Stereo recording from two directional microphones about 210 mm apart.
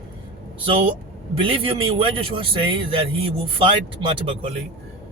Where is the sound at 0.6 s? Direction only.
25° right (ahead or behind).